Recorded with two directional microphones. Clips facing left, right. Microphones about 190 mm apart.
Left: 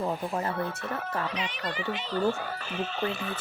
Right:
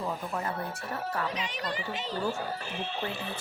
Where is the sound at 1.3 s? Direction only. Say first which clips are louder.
Left 1 dB; 40° right (ahead or behind).